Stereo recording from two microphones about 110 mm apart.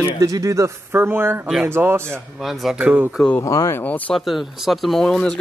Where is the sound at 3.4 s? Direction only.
30° left (ahead or behind).